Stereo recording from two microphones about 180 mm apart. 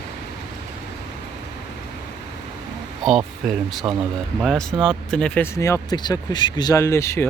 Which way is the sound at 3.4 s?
Centre (ahead or behind).